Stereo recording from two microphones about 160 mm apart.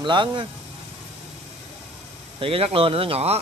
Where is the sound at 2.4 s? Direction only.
35° right (ahead or behind).